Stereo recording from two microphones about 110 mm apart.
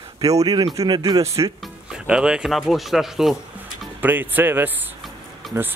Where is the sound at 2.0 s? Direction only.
5° right (ahead or behind).